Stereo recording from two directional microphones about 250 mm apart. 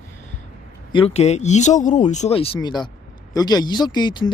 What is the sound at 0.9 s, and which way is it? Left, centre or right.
Speech, left.